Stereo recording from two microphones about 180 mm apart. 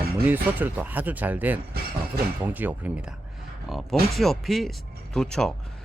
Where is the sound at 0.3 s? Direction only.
10° right (ahead or behind).